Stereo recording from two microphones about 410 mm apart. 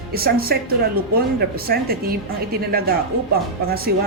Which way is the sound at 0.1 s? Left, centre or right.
Right.